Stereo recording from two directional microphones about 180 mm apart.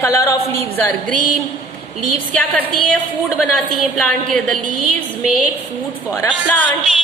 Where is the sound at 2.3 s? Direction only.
5° left (ahead or behind).